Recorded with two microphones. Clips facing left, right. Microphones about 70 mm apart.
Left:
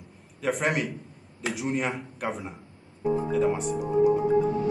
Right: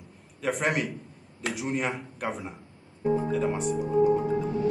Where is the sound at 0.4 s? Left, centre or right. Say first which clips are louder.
Left 1 dB; centre.